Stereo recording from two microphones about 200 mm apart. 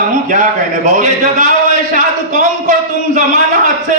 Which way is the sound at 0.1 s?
40° right (ahead or behind).